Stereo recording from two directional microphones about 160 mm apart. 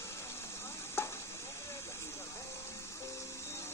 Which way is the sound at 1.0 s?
15° left (ahead or behind).